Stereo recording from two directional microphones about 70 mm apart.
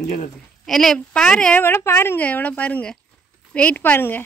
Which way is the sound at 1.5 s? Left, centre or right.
Left.